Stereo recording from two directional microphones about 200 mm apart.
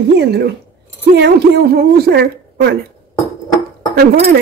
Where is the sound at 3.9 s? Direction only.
50° right (ahead or behind).